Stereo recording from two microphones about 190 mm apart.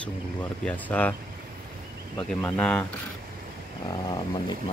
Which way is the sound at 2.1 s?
10° left (ahead or behind).